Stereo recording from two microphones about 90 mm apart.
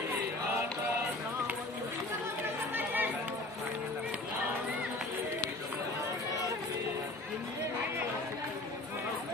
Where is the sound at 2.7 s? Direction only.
20° right (ahead or behind).